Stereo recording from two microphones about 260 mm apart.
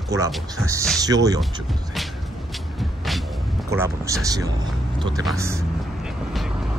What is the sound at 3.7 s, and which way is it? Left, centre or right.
Speech, centre.